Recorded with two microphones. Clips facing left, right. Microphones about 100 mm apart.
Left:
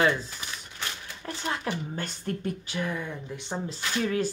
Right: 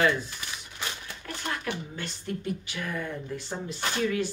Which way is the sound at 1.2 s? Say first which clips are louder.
Left 3 dB; 25° left (ahead or behind).